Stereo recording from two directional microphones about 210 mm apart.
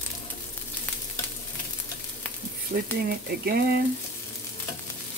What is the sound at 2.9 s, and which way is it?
Speech, 45° right (ahead or behind).